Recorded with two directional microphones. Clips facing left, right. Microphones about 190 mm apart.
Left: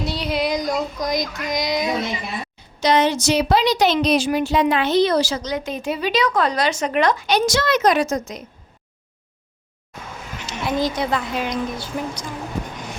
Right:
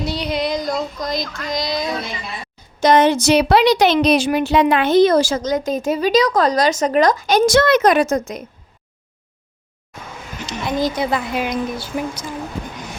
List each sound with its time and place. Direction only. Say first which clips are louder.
0.0 s a sound: right 1 dB; centre (ahead or behind); by 2.0 s 20° left (ahead or behind)
2.8 s a woman's voice: right 4 dB; 50° right (ahead or behind)
10.4 s a woman's voice: right 2 dB; 5° left (ahead or behind)